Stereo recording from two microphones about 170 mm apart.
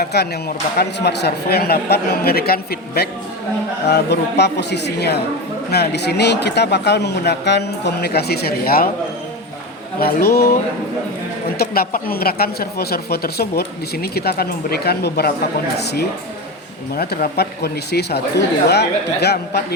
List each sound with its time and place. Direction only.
0.0 s speech: 70° left (ahead or behind)
10.0 s speech: 65° left (ahead or behind)
11.5 s speech: 65° left (ahead or behind)
16.9 s speech: 65° left (ahead or behind)